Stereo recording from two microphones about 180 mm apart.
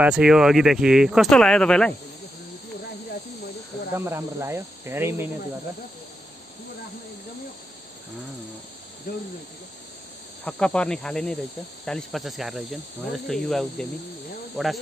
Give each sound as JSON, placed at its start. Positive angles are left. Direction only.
{"t": 0.0, "sound": "speech", "side_deg": -5}
{"t": 3.9, "sound": "speech", "side_deg": -15}
{"t": 9.1, "sound": "speech", "side_deg": 50}
{"t": 10.4, "sound": "speech", "side_deg": 5}